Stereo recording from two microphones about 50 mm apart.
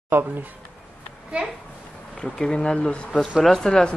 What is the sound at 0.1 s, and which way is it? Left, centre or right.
Speech, right.